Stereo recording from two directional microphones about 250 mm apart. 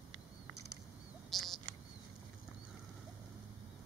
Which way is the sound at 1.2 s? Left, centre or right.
Centre.